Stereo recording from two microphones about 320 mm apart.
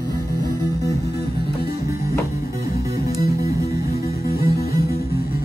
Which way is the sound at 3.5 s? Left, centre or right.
Centre.